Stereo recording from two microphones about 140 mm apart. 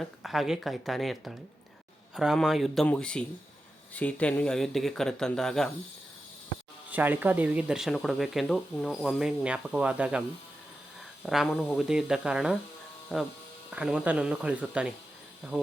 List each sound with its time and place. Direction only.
0.0 s speech: centre (ahead or behind)
6.9 s speech: 10° right (ahead or behind)
11.3 s speech: centre (ahead or behind)